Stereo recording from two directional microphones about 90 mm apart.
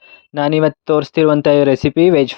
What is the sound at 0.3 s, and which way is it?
Speech, 90° left.